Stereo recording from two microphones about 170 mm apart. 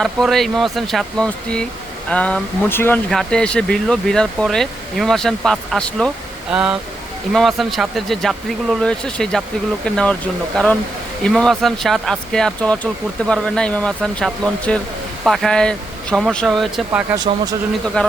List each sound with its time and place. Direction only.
0.0 s speech: centre (ahead or behind)
11.2 s speech: 5° left (ahead or behind)
17.2 s speech: 25° right (ahead or behind)